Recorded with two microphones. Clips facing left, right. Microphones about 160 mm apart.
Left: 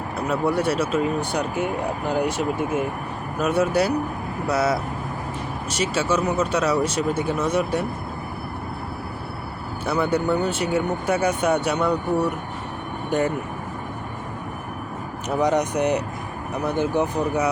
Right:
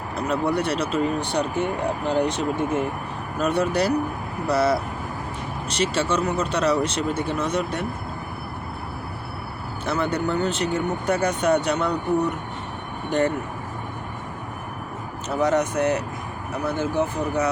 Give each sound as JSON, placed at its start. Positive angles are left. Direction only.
{"t": 0.3, "sound": "speech", "side_deg": 5}
{"t": 9.8, "sound": "speech", "side_deg": 10}
{"t": 13.1, "sound": "speech", "side_deg": 10}
{"t": 15.3, "sound": "speech", "side_deg": 15}